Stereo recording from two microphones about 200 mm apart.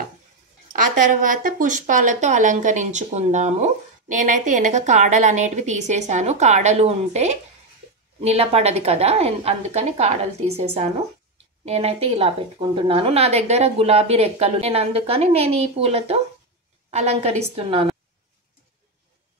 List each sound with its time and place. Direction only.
0.7 s speech: 40° right (ahead or behind)